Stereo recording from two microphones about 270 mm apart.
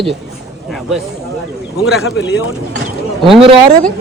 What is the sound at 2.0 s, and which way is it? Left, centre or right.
Speech, left.